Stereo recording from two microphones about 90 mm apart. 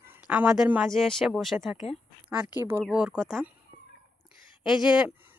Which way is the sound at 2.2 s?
15° right (ahead or behind).